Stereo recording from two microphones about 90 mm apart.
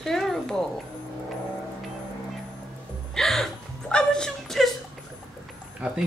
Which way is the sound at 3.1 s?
5° left (ahead or behind).